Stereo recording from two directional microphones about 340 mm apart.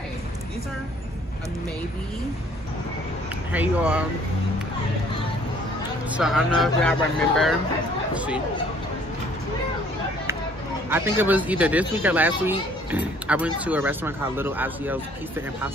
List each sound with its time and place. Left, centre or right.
3.5 s speech: centre
6.1 s speech: centre
10.9 s speech: centre